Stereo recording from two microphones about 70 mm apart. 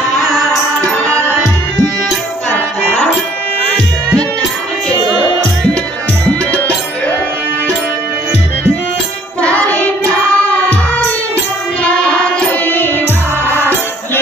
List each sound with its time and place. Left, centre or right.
0.9 s music: centre
9.4 s singing: centre
10.3 s music: left
11.8 s child singing: centre
12.6 s music: left